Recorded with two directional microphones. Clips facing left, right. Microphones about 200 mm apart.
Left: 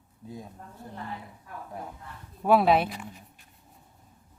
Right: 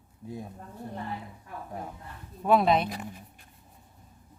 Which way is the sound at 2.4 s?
5° left (ahead or behind).